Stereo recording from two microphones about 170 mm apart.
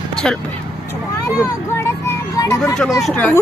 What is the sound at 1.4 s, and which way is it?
Speech, 20° left (ahead or behind).